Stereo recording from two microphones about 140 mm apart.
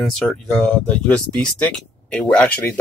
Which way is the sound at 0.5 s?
5° left (ahead or behind).